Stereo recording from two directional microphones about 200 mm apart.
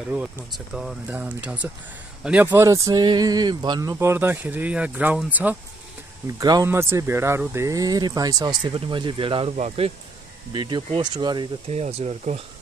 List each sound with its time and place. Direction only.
0.1 s speech: 5° right (ahead or behind); by 11.8 s 20° right (ahead or behind)
11.8 s speech: 35° right (ahead or behind)